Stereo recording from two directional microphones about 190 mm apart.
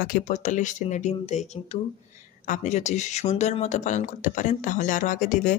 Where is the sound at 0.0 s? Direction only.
40° left (ahead or behind).